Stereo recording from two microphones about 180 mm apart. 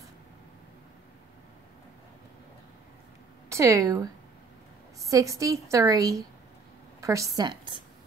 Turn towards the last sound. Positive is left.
turn(degrees=-25)  # may be behind; listen again after turning